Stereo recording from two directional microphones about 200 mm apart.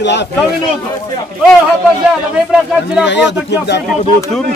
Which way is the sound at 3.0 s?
60° left (ahead or behind).